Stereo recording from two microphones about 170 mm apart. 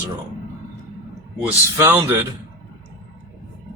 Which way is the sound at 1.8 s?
15° right (ahead or behind).